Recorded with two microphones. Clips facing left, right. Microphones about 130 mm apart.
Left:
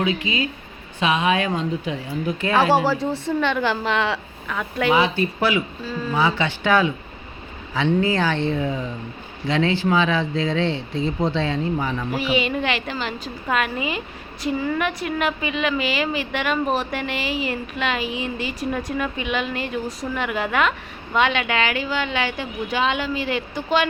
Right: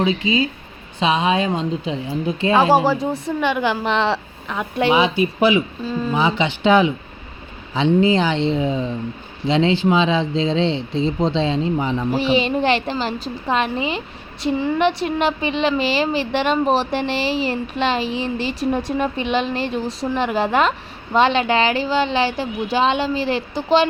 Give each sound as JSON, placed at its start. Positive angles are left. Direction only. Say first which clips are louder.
{"t": 0.0, "sound": "a woman's voice", "louder": "right 4 dB", "side_deg": -30}